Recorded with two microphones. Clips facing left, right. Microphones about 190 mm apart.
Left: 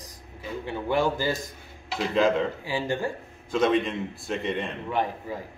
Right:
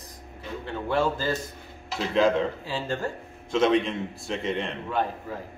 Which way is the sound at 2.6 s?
15° left (ahead or behind).